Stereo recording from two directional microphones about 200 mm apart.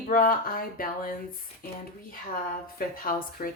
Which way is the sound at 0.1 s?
45° left (ahead or behind).